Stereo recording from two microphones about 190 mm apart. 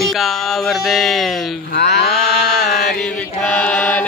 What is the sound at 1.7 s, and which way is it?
Mantra, 60° left (ahead or behind).